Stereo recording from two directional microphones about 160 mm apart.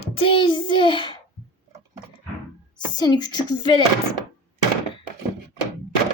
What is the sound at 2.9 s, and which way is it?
Speech, 25° left (ahead or behind).